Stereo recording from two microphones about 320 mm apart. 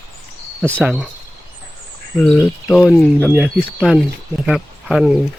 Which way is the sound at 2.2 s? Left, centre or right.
Centre.